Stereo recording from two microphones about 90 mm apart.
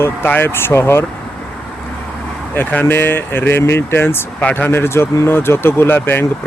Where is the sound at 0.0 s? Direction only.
25° left (ahead or behind).